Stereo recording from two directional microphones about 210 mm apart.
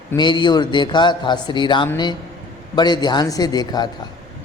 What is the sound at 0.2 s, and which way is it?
A man's voice, 20° left (ahead or behind).